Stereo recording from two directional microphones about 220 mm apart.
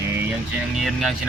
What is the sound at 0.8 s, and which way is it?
Speech, centre (ahead or behind).